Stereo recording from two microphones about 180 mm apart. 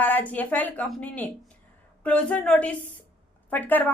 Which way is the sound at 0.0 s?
10° left (ahead or behind).